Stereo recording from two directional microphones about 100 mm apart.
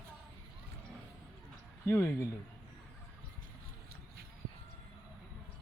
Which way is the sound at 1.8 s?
25° left (ahead or behind).